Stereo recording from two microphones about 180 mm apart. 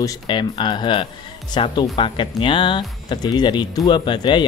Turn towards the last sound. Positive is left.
turn(degrees=25)  # may be behind; listen again after turning